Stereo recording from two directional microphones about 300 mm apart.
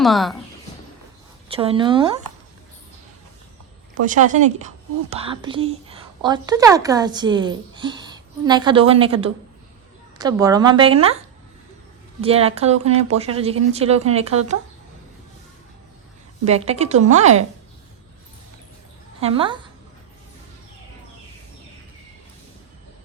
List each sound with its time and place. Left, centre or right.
0.0 s a woman's voice: centre
1.5 s a woman's voice: centre
4.0 s a woman's voice: right
12.2 s a woman's voice: centre
16.4 s a woman's voice: right
19.2 s a woman's voice: centre